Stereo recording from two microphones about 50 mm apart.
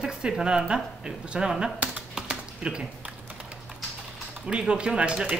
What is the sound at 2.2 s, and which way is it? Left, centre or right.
Typing, centre.